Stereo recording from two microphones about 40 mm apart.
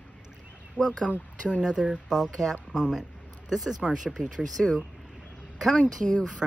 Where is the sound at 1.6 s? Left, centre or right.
Centre.